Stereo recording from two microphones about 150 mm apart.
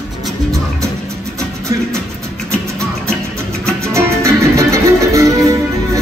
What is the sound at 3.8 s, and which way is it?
Music, 20° right (ahead or behind).